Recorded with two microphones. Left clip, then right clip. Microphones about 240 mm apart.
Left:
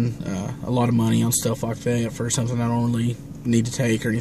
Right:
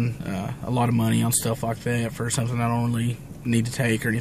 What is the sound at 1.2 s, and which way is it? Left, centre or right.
Speech, centre.